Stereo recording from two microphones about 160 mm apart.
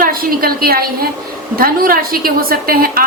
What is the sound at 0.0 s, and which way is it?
A woman's voice, 65° right (ahead or behind).